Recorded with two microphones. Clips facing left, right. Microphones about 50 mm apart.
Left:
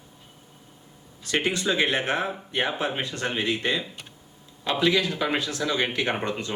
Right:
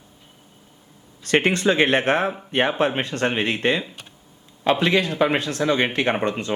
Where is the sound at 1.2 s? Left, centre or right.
Right.